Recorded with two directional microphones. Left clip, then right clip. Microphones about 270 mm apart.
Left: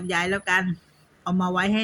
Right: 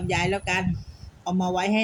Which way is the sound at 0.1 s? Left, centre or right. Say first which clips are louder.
Left 2 dB; centre.